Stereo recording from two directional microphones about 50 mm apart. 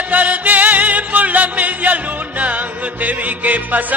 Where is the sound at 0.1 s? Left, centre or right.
Right.